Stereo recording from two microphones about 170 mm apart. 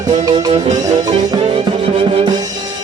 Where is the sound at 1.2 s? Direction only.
20° right (ahead or behind).